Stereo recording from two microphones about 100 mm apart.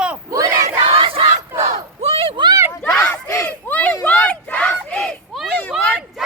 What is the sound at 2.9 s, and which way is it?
Battle cry, 15° left (ahead or behind).